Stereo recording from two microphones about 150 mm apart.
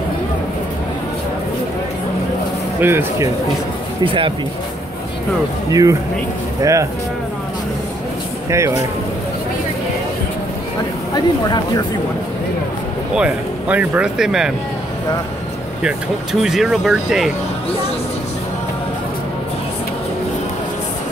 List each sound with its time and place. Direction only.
2.8 s speech: 15° right (ahead or behind)
4.0 s speech: 35° right (ahead or behind)
5.7 s speech: 25° right (ahead or behind)
8.5 s speech: 20° right (ahead or behind)
11.1 s speech: 25° left (ahead or behind)
13.1 s speech: 10° right (ahead or behind)
16.3 s speech: 5° right (ahead or behind)